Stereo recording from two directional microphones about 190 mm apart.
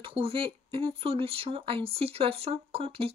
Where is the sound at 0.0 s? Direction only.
30° right (ahead or behind).